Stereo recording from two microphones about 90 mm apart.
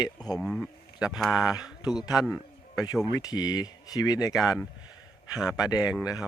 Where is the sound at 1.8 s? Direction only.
50° left (ahead or behind).